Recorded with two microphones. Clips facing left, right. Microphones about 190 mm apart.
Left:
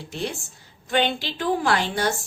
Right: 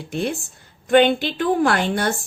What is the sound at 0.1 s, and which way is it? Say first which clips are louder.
A woman's voice: right 6 dB; 55° right (ahead or behind).